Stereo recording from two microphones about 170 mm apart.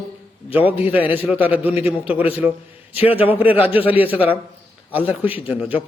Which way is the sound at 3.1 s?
35° left (ahead or behind).